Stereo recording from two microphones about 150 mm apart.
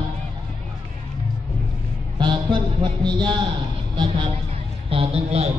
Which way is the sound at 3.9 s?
30° right (ahead or behind).